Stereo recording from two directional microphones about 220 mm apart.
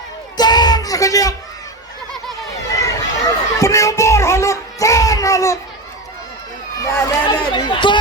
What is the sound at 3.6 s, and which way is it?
Child singing, 15° left (ahead or behind).